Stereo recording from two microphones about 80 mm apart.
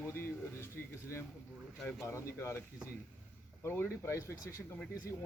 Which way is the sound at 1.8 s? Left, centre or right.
Centre.